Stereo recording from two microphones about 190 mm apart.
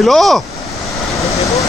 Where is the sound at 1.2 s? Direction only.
15° left (ahead or behind).